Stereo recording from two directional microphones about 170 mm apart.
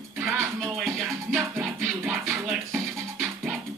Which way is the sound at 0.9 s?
Centre (ahead or behind).